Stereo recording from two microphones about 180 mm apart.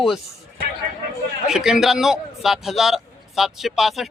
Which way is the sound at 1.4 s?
5° right (ahead or behind).